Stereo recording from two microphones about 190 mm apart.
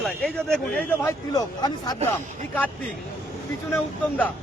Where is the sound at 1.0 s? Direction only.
20° left (ahead or behind).